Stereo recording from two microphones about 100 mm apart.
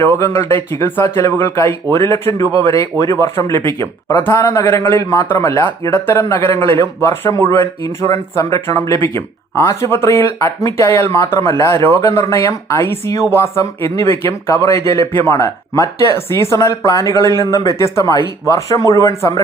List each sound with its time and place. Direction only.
0.0 s speech: 25° left (ahead or behind)